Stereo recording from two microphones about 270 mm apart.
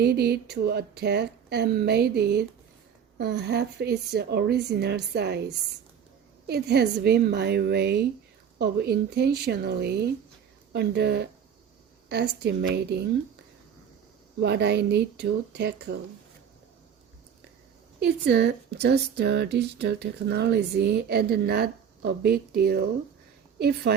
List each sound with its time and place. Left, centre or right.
0.0 s speech: right
6.5 s speech: right
14.4 s speech: right
18.0 s speech: right